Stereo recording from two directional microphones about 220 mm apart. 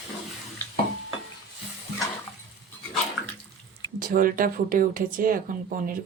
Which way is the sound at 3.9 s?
40° right (ahead or behind).